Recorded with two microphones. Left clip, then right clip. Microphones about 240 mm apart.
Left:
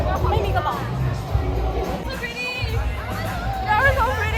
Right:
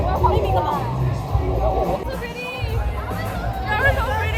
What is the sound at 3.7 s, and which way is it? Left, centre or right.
Hubbub, centre.